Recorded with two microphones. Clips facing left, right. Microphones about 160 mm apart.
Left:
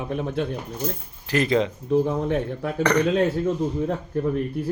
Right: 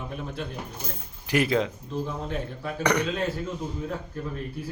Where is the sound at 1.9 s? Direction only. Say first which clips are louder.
Left 10 dB; 60° left (ahead or behind).